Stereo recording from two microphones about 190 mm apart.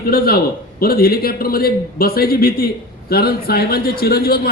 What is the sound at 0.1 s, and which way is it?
A man's voice, 50° left (ahead or behind).